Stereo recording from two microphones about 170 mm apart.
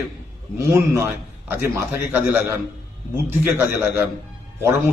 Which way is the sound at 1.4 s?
10° right (ahead or behind).